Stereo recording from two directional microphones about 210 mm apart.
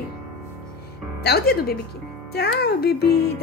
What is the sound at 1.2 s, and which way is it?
Speech, 50° left (ahead or behind).